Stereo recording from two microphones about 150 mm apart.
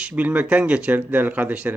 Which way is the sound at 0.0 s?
10° right (ahead or behind).